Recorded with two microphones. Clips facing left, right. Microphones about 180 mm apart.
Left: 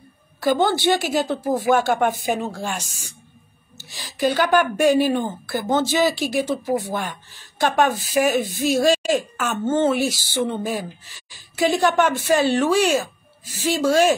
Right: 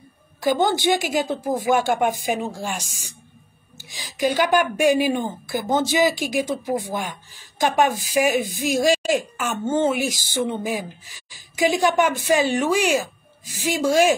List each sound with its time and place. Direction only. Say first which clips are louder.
0.4 s speech: left 1 dB; 15° right (ahead or behind)